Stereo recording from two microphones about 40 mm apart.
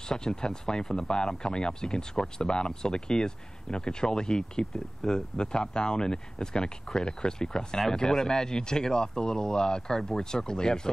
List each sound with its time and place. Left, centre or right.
0.1 s speech: centre